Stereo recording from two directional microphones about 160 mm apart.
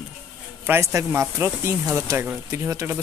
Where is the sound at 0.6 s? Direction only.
15° right (ahead or behind).